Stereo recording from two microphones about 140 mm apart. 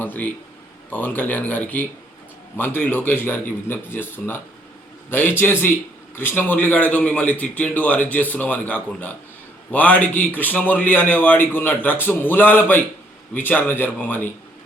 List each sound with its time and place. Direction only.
0.0 s a man's voice: 10° left (ahead or behind)
5.4 s a man's voice: 15° left (ahead or behind)